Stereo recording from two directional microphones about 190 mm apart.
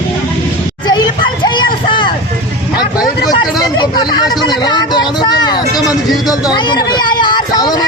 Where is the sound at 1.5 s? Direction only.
25° left (ahead or behind).